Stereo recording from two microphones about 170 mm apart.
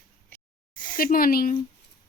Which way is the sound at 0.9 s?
55° left (ahead or behind).